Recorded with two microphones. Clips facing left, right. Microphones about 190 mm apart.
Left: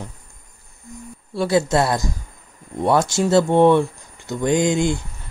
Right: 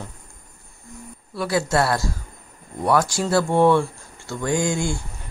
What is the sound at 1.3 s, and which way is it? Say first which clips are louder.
Speech: left 4 dB; 25° left (ahead or behind).